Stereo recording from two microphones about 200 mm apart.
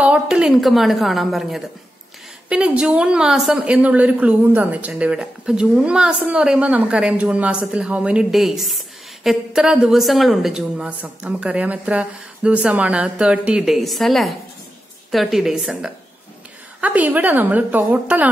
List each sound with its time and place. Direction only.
0.0 s a woman's voice: 5° right (ahead or behind)